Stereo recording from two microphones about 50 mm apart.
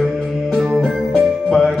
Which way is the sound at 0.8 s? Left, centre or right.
Centre.